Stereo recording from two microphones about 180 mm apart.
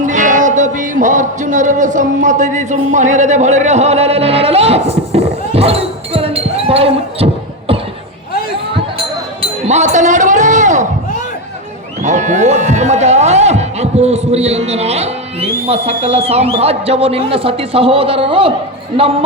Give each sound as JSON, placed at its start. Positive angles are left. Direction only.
{"t": 0.0, "sound": "music", "side_deg": -45}
{"t": 9.6, "sound": "a sound", "side_deg": -40}
{"t": 12.0, "sound": "speech", "side_deg": -40}